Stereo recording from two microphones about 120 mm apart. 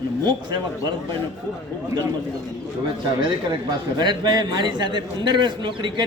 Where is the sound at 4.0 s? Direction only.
35° right (ahead or behind).